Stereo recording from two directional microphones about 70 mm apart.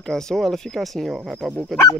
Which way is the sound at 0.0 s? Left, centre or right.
Centre.